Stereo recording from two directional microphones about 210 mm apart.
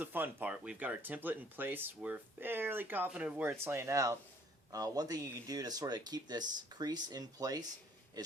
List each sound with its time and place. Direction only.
0.0 s speech: 10° right (ahead or behind)